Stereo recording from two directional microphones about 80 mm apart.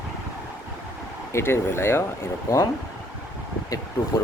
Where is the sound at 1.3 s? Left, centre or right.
Left.